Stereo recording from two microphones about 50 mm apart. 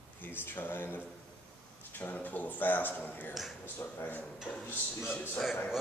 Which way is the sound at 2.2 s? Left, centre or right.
Left.